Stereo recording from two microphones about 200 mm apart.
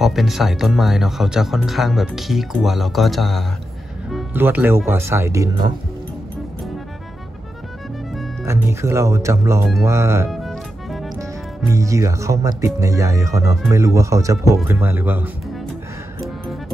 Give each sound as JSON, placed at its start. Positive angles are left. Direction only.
{"t": 0.0, "sound": "speech", "side_deg": 0}
{"t": 4.1, "sound": "music", "side_deg": 0}
{"t": 4.4, "sound": "speech", "side_deg": -10}
{"t": 8.5, "sound": "speech", "side_deg": -15}
{"t": 10.3, "sound": "music", "side_deg": 0}
{"t": 11.7, "sound": "speech", "side_deg": -15}